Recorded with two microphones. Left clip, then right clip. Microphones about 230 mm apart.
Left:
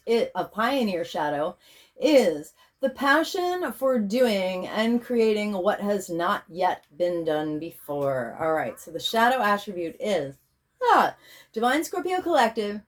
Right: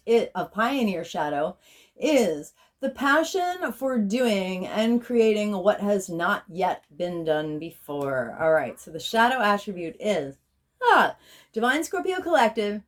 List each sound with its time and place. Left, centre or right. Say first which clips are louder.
0.0 s speech: right 2 dB; right